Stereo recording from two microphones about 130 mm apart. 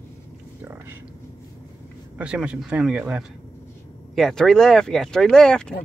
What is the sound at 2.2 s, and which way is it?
Speech, 10° right (ahead or behind).